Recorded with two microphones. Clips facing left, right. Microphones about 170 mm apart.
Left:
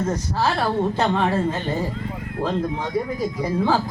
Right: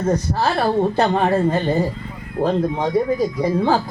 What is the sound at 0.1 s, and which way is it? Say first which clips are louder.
A woman's voice: right 3 dB; 65° right (ahead or behind).